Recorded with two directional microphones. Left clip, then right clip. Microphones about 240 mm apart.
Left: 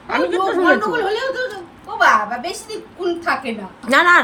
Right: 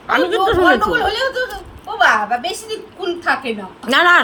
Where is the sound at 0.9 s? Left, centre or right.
Right.